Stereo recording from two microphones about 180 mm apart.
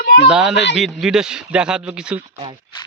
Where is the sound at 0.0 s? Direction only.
60° left (ahead or behind).